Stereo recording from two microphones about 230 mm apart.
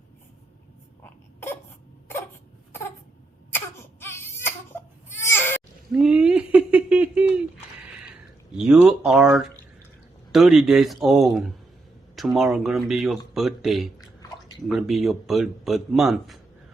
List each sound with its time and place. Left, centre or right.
1.0 s a sound: centre
3.5 s baby cry: centre
5.9 s a sound: centre
8.5 s speech: centre
14.0 s bathtub: centre
14.7 s speech: centre